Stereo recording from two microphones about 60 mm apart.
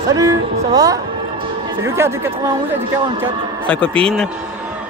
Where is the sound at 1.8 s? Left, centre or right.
Right.